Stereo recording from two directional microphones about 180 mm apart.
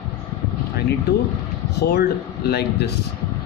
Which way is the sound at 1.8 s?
65° left (ahead or behind).